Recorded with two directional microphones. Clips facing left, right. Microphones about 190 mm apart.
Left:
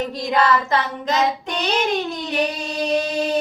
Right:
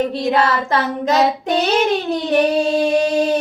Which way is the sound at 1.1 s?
40° right (ahead or behind).